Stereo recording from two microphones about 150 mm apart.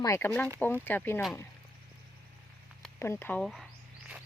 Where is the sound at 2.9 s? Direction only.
15° left (ahead or behind).